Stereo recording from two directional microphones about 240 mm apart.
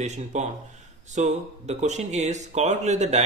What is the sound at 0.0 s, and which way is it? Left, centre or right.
A man's voice, right.